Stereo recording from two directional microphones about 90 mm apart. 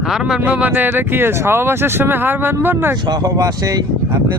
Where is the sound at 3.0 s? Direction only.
45° right (ahead or behind).